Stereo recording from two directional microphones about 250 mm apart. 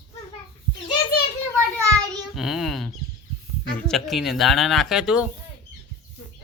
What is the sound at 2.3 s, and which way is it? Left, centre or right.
Speech, centre.